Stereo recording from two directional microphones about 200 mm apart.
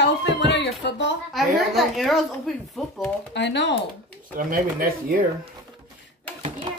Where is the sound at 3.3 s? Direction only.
60° left (ahead or behind).